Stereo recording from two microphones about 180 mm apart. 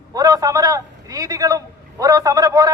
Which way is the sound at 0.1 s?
20° right (ahead or behind).